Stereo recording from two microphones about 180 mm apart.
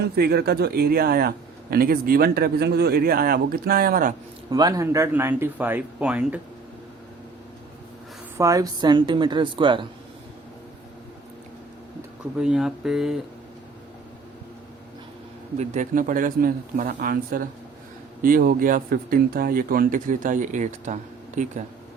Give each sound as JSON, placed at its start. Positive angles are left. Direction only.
{"t": 0.0, "sound": "speech", "side_deg": -60}
{"t": 4.5, "sound": "speech", "side_deg": -20}
{"t": 8.4, "sound": "a woman's voice", "side_deg": -20}
{"t": 12.4, "sound": "speech", "side_deg": -5}
{"t": 15.5, "sound": "speech", "side_deg": -45}